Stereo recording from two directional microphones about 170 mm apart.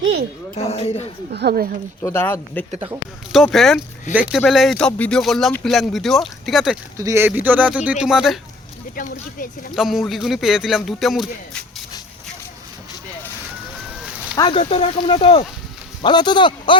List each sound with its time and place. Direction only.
0.0 s a sound: 90° right
0.5 s speech: 35° left (ahead or behind)
1.3 s speech: 70° right (ahead or behind)
2.0 s speech: 15° left (ahead or behind)
3.3 s speech: centre (ahead or behind)
6.9 s speech: 20° right (ahead or behind); by 8.4 s 5° right (ahead or behind)
9.0 s speech: 55° left (ahead or behind)
9.7 s speech: centre (ahead or behind)
14.3 s speech: 25° left (ahead or behind)